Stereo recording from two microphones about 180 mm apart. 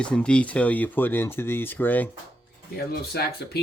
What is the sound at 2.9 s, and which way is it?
Speech, 60° left (ahead or behind).